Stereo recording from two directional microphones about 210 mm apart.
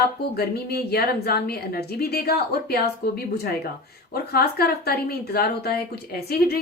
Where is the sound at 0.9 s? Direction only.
50° left (ahead or behind).